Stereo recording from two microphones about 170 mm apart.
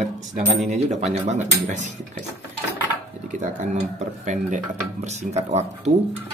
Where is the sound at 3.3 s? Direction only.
45° right (ahead or behind).